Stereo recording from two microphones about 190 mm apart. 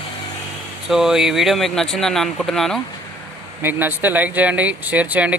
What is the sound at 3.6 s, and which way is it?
Speech, 10° right (ahead or behind).